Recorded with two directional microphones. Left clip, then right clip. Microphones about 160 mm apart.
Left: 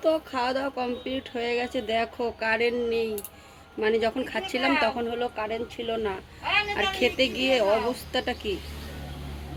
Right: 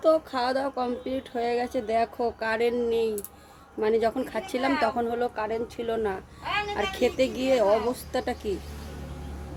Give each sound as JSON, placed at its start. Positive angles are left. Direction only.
{"t": 0.0, "sound": "speech", "side_deg": -10}